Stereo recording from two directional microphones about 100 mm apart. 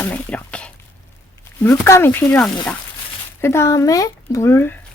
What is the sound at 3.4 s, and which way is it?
Speech, 25° left (ahead or behind).